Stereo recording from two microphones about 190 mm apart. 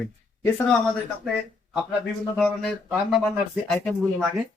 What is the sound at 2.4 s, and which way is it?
Speech, centre (ahead or behind).